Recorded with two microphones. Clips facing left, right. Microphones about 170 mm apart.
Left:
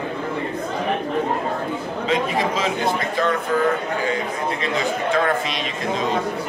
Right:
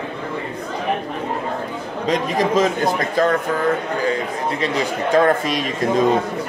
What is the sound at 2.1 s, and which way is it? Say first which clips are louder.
Speech: right 4 dB; 40° right (ahead or behind).